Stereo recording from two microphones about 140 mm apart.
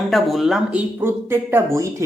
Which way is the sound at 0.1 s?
Centre (ahead or behind).